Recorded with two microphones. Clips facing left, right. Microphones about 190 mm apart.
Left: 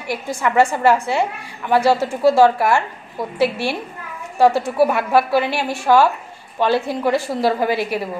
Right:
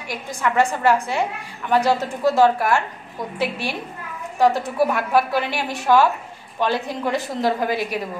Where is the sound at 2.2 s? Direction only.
10° left (ahead or behind).